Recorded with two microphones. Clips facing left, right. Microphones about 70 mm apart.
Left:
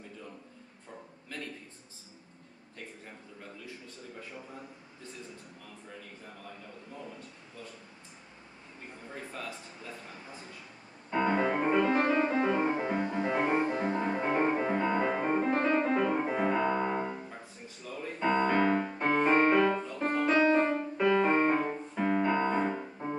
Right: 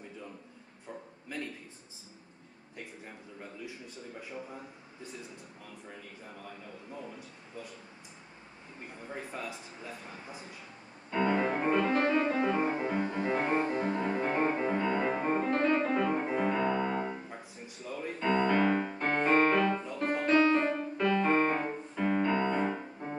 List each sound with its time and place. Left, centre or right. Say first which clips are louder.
1.3 s a sound: right 3 dB; centre
3.6 s a man's voice: right 2 dB; centre
9.1 s a man's voice: right 2 dB; centre
11.1 s music: left 1 dB; centre
15.0 s music: left 1 dB; centre
15.3 s music: even; centre
17.0 s piano: even; centre
18.5 s music: even; centre
18.9 s piano: left 2 dB; centre
20.0 s music: right 1 dB; centre
21.6 s music: left 1 dB; centre
22.6 s music: left 1 dB; centre